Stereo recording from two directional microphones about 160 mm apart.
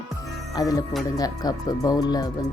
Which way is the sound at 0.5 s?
25° left (ahead or behind).